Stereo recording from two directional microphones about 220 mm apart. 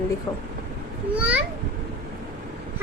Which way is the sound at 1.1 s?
5° right (ahead or behind).